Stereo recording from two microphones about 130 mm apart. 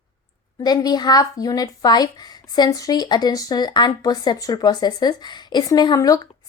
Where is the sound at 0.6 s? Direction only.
30° left (ahead or behind).